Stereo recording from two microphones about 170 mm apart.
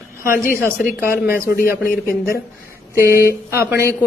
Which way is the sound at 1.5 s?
60° left (ahead or behind).